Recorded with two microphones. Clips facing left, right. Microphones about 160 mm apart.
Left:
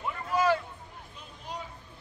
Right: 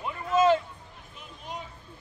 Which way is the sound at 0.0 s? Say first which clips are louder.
Right 4 dB; 20° right (ahead or behind).